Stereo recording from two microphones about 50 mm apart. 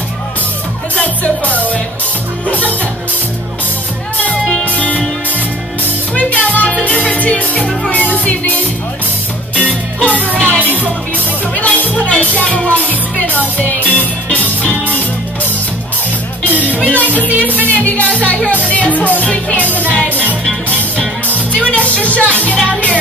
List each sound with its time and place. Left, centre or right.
0.9 s music: left
2.4 s speech: left
4.7 s music: left
6.1 s music: left
10.3 s music: centre
10.6 s music: left
16.8 s music: left